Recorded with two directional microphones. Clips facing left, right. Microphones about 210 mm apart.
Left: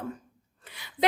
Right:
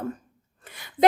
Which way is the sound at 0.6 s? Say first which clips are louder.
Right 3 dB; 50° right (ahead or behind).